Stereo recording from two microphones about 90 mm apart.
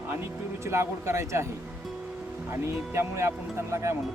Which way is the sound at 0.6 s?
30° right (ahead or behind).